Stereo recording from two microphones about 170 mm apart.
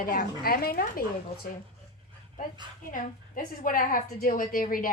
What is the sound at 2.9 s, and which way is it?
A woman's voice, 50° left (ahead or behind).